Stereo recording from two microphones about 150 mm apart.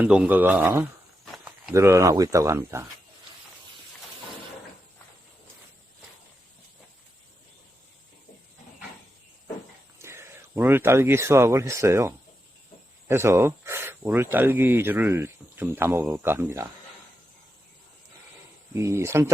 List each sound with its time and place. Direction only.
0.0 s speech: 10° right (ahead or behind)
1.2 s a sound: centre (ahead or behind)
1.7 s speech: 20° right (ahead or behind)
10.0 s speech: 15° right (ahead or behind)
18.7 s speech: 20° right (ahead or behind)